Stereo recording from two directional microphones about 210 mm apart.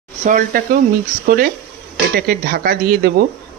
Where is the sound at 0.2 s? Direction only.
40° right (ahead or behind).